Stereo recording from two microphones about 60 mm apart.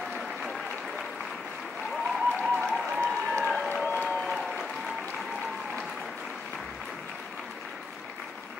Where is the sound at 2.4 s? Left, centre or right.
Centre.